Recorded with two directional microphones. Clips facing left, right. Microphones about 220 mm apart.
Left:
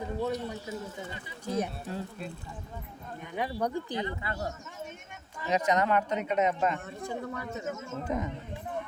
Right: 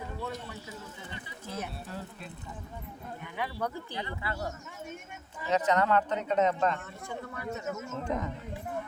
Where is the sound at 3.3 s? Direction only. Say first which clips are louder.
Left 4 dB; 15° left (ahead or behind).